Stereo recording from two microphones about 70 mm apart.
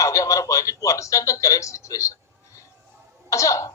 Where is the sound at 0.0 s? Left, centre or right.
Left.